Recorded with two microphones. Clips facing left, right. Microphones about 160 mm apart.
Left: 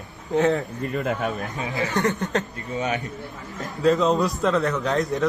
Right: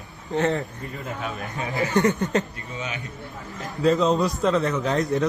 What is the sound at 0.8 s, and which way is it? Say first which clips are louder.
Speech: left 8 dB; 75° left (ahead or behind).